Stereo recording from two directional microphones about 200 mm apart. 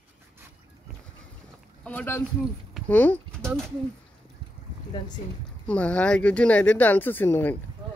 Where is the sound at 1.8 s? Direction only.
10° left (ahead or behind).